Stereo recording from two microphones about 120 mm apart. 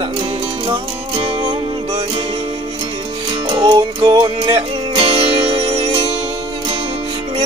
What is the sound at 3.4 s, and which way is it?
Music, 40° right (ahead or behind).